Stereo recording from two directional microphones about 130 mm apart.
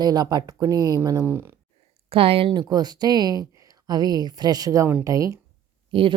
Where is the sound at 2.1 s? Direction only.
45° right (ahead or behind).